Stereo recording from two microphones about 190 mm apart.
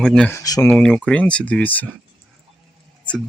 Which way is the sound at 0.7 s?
5° left (ahead or behind).